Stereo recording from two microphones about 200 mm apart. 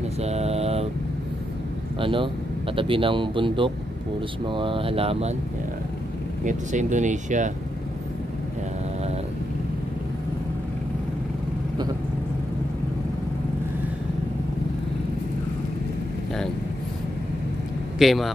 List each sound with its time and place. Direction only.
0.2 s mantra: 30° right (ahead or behind)
2.0 s speech: 25° right (ahead or behind)
6.4 s speech: 40° right (ahead or behind)
17.9 s speech: centre (ahead or behind)